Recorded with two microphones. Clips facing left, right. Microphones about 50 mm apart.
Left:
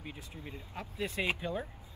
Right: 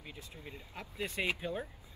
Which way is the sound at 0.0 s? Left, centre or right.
Left.